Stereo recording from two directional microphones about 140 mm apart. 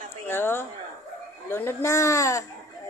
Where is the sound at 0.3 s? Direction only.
15° left (ahead or behind).